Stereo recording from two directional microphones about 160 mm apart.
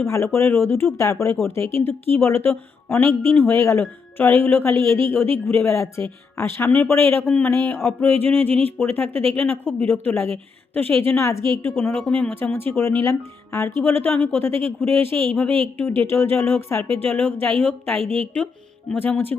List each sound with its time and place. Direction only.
0.0 s speech: 15° left (ahead or behind)
15.4 s a woman's voice: 35° right (ahead or behind)
16.0 s speech: 15° left (ahead or behind)